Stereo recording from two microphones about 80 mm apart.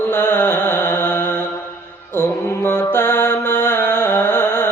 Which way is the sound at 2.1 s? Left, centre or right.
Left.